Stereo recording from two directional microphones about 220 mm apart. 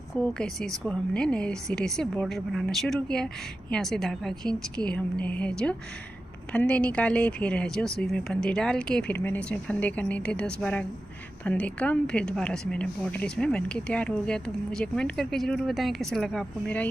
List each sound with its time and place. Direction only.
0.3 s a woman's voice: 5° left (ahead or behind)